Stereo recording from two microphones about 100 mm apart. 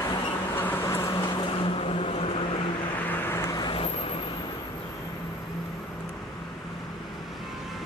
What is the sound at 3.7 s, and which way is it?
Vehicle, 65° left (ahead or behind).